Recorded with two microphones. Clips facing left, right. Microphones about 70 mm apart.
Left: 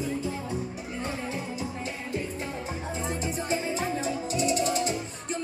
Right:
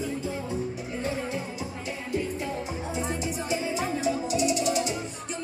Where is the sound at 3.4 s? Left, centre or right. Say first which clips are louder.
Even; left.